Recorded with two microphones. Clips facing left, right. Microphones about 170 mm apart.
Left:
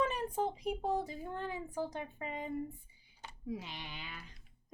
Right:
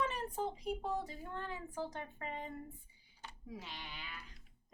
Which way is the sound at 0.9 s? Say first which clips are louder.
Left 4 dB; 10° left (ahead or behind).